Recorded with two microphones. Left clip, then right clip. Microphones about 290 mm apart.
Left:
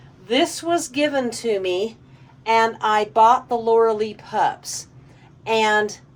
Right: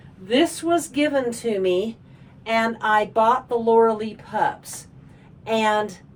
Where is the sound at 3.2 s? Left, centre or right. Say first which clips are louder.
Left 3 dB; centre.